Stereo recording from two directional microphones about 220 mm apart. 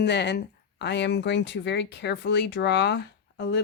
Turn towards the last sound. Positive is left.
turn(degrees=50)  # may be behind; listen again after turning